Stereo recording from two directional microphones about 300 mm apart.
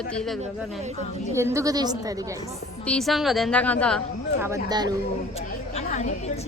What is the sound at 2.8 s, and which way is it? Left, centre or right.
A woman's voice, centre.